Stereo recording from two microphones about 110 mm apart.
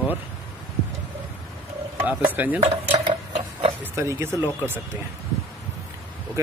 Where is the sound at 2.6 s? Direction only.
50° right (ahead or behind).